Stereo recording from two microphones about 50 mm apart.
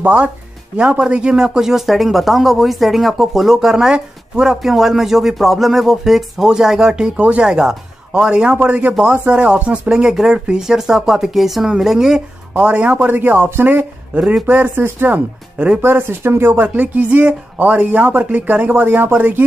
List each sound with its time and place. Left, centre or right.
0.0 s speech: right
8.5 s speech: right; by 12.2 s centre
12.5 s speech: right
15.8 s speech: right
16.6 s speech: right